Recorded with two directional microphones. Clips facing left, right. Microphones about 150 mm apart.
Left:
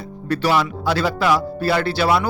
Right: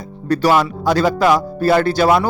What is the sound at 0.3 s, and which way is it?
Speech, 45° right (ahead or behind).